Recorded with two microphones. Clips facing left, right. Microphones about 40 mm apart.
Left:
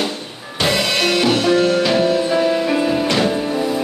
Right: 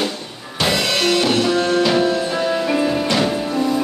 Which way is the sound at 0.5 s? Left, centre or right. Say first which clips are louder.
Left 1 dB; centre.